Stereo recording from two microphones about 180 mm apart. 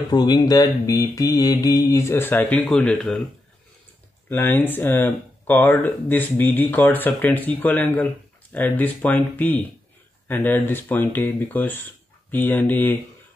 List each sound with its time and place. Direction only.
0.1 s speech: 25° left (ahead or behind); by 3.2 s 5° left (ahead or behind)
4.4 s speech: 10° left (ahead or behind)